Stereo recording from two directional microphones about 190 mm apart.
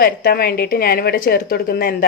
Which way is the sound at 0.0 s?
50° left (ahead or behind).